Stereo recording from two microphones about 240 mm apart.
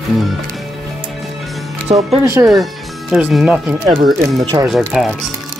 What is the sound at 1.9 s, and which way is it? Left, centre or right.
Speech, right.